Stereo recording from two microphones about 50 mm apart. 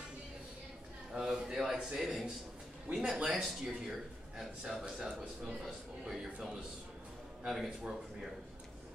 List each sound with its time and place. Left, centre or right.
1.1 s a man's voice: centre
2.9 s speech: right
3.3 s a man's voice: centre